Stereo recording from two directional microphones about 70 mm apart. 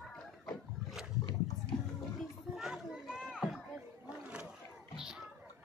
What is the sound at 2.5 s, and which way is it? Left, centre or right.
Children playing, centre.